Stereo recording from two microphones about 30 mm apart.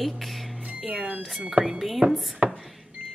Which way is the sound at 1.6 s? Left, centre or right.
Right.